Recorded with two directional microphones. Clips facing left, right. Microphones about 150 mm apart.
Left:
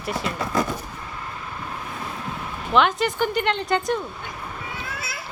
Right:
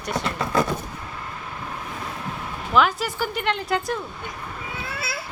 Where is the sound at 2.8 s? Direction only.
5° right (ahead or behind).